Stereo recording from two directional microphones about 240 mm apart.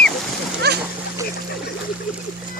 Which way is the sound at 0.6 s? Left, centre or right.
Right.